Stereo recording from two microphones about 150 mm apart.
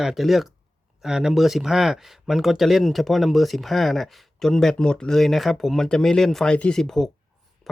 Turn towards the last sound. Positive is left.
turn(degrees=0)  # may be behind; listen again after turning